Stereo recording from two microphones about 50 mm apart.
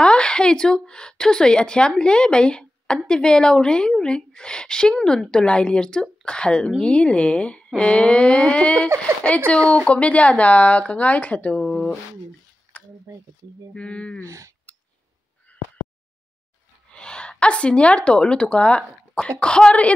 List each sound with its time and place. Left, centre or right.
0.0 s a woman's voice: centre
13.1 s speech: right
13.7 s speech: left
14.2 s speech: right
16.9 s a woman's voice: centre